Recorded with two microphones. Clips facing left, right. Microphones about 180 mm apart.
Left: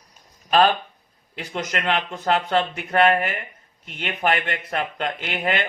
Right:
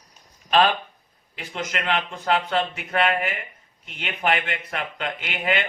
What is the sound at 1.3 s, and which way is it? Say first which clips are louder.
A man's voice: left 2 dB; 50° left (ahead or behind).